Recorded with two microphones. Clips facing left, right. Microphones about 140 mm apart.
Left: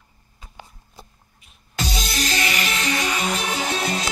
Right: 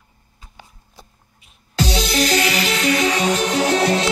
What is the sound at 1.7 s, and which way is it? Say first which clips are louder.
Music: right 8 dB; 80° right.